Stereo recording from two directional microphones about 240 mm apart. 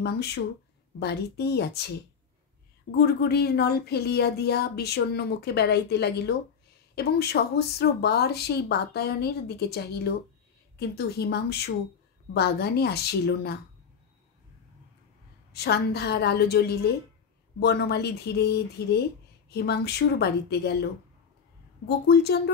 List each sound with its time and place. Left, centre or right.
0.0 s speech: left
3.0 s speech: left
15.5 s speech: left
21.8 s speech: left